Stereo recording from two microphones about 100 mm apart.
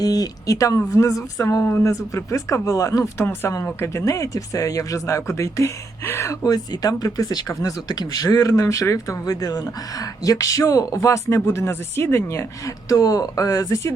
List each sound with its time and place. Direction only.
0.0 s speech: 40° left (ahead or behind)
1.6 s speech: 25° left (ahead or behind)